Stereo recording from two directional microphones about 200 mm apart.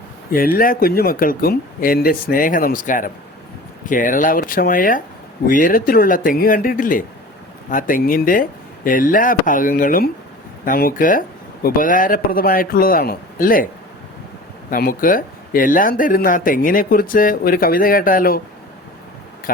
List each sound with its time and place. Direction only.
0.3 s speech: 45° left (ahead or behind)
14.7 s speech: 45° left (ahead or behind)